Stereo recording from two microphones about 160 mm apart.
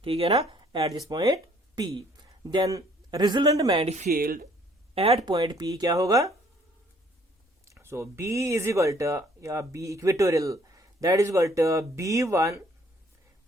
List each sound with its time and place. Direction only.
0.0 s speech: 35° right (ahead or behind)
3.8 s speech: 45° right (ahead or behind)
4.1 s speech: 65° right (ahead or behind)
4.9 s speech: 40° right (ahead or behind)
5.2 s speech: 25° right (ahead or behind)
7.6 s speech: 15° right (ahead or behind)